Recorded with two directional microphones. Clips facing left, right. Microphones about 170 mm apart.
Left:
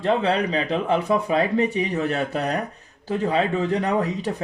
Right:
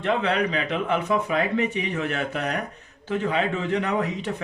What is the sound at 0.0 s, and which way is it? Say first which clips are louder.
Speech: left 2 dB; 35° left (ahead or behind).